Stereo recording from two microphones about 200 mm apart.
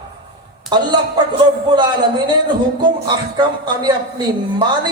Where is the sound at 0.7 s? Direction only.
20° right (ahead or behind).